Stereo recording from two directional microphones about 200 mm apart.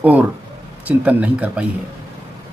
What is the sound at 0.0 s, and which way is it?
A man's voice, 5° right (ahead or behind).